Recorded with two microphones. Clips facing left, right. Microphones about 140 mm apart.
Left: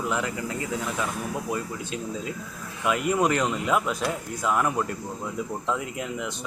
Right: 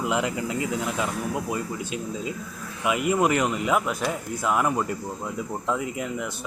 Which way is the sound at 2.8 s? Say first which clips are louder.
Right 1 dB; 5° right (ahead or behind).